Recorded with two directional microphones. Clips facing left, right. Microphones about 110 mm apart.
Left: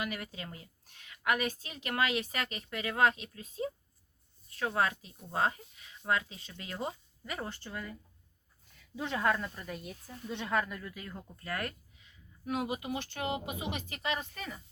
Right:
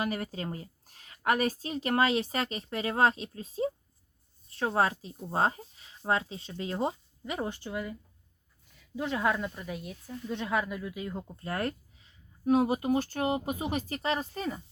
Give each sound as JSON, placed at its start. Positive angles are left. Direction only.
{"t": 0.0, "sound": "a woman's voice", "side_deg": -35}
{"t": 9.0, "sound": "speech", "side_deg": -5}
{"t": 11.2, "sound": "a woman's voice", "side_deg": -30}